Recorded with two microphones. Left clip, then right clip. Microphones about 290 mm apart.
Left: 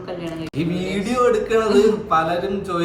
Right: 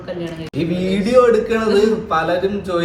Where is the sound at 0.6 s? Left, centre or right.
Centre.